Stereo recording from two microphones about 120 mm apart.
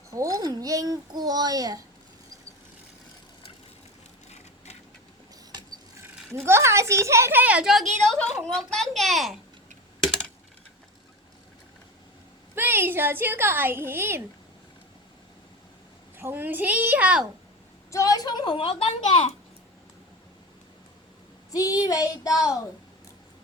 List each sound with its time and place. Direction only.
0.1 s a child's voice: 30° right (ahead or behind)
4.3 s a sound: 70° left (ahead or behind)
6.3 s a woman's voice: 20° right (ahead or behind); by 9.4 s centre (ahead or behind)
12.5 s a woman's voice: 20° right (ahead or behind)
16.1 s a woman's voice: 15° right (ahead or behind)
17.9 s a woman's voice: 30° left (ahead or behind); by 19.3 s 65° left (ahead or behind)
21.5 s a sound: 30° left (ahead or behind)
21.8 s child singing: 30° left (ahead or behind)